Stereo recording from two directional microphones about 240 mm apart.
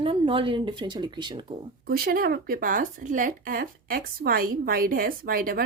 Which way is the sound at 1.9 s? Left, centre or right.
Right.